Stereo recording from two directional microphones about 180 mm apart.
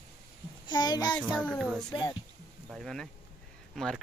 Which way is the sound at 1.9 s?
25° left (ahead or behind).